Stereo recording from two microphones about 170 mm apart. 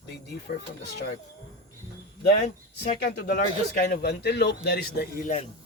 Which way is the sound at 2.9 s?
65° left (ahead or behind).